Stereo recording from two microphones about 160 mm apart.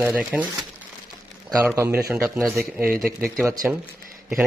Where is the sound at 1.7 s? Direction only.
15° right (ahead or behind).